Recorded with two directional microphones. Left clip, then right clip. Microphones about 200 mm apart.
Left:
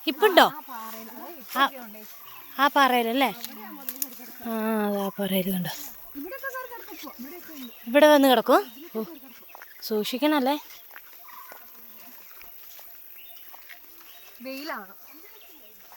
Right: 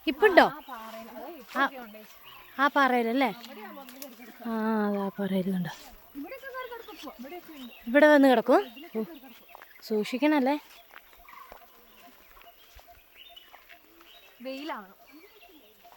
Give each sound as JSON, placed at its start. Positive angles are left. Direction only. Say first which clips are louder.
{"t": 0.0, "sound": "speech", "louder": "left 2 dB", "side_deg": -5}
{"t": 1.5, "sound": "speech", "louder": "left 4 dB", "side_deg": -5}
{"t": 4.0, "sound": "bird", "louder": "left 5 dB", "side_deg": 55}
{"t": 4.4, "sound": "speech", "louder": "left 2 dB", "side_deg": 0}
{"t": 7.9, "sound": "speech", "louder": "left 2 dB", "side_deg": -5}
{"t": 14.6, "sound": "speech", "louder": "left 4 dB", "side_deg": 10}